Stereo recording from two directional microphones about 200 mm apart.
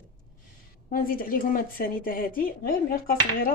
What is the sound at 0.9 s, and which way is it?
A woman's voice, 45° left (ahead or behind).